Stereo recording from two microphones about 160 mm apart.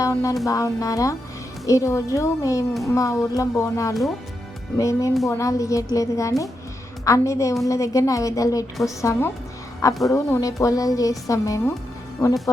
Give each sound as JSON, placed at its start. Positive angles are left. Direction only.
{"t": 0.0, "sound": "music", "side_deg": 20}
{"t": 0.4, "sound": "a woman's voice", "side_deg": 20}